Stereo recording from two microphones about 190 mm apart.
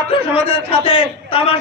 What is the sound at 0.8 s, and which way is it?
Speech, 30° left (ahead or behind).